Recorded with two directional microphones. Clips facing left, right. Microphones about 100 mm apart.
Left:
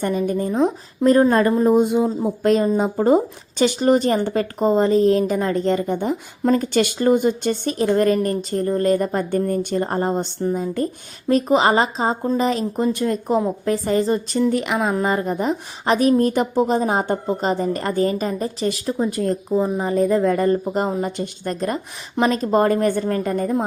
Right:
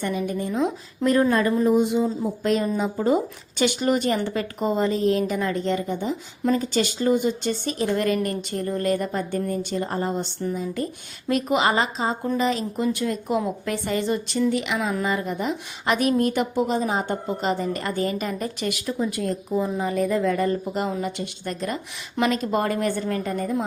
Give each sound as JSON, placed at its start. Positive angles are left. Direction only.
{"t": 0.0, "sound": "a woman's voice", "side_deg": 40}